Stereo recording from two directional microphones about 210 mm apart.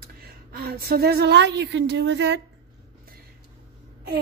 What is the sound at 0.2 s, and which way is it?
A woman's voice, 50° right (ahead or behind).